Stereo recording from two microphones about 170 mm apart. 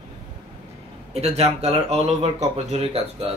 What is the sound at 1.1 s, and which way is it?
Speech, 40° right (ahead or behind).